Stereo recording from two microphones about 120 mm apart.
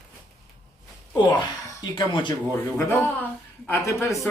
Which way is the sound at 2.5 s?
20° left (ahead or behind).